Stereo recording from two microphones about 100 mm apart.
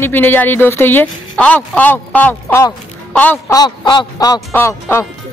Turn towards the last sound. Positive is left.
turn(degrees=25)  # may be behind; listen again after turning